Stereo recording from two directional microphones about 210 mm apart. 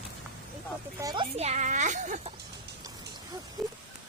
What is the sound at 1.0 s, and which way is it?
Speech, 15° right (ahead or behind).